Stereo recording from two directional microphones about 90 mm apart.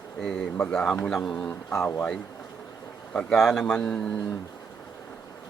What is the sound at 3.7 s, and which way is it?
Speech, 10° left (ahead or behind).